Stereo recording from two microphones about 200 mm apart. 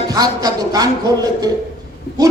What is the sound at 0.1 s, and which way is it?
A man's voice, 20° right (ahead or behind).